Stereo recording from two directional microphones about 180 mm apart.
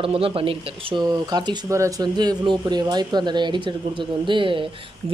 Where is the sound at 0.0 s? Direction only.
30° right (ahead or behind).